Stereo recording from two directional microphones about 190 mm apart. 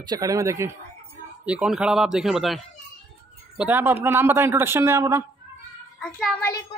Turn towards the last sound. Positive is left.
turn(degrees=0)  # may be behind; listen again after turning